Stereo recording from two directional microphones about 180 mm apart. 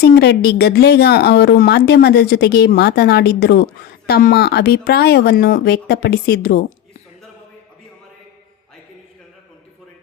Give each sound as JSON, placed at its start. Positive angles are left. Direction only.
{"t": 0.0, "sound": "a woman's voice", "side_deg": 65}